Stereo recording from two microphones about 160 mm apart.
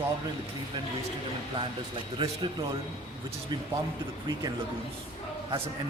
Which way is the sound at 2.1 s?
30° right (ahead or behind).